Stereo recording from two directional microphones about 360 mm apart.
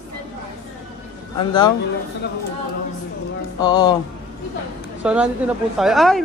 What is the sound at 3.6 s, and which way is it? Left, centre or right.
Speech, centre.